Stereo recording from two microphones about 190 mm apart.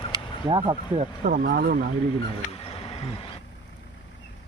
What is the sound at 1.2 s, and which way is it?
Speech, 50° right (ahead or behind).